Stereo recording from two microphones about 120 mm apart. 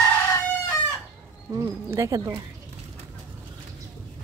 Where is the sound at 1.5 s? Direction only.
25° right (ahead or behind).